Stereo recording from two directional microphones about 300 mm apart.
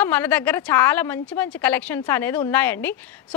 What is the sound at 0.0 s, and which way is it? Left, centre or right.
A woman's voice, centre.